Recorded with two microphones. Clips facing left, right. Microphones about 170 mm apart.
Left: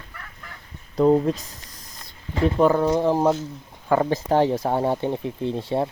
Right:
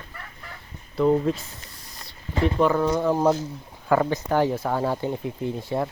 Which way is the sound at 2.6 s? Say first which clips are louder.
Left 3 dB; 35° left (ahead or behind).